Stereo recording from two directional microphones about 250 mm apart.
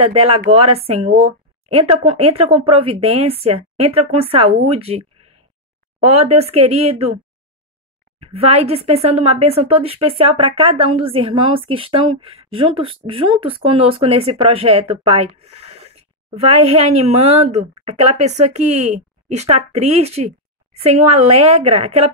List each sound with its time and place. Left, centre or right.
0.0 s a woman's voice: right
8.2 s a woman's voice: right